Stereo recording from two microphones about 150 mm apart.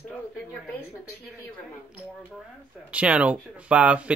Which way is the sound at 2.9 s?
10° right (ahead or behind).